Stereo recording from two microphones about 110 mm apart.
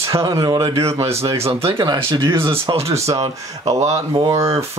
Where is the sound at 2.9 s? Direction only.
25° right (ahead or behind).